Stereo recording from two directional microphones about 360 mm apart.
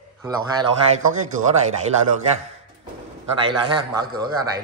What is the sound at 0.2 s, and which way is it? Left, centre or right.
A man's voice, centre.